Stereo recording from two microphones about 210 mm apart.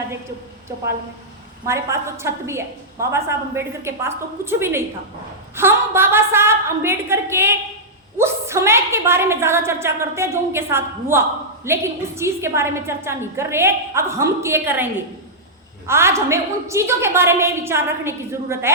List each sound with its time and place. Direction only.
1.6 s a woman's voice: 15° right (ahead or behind)
15.9 s a woman's voice: 10° right (ahead or behind)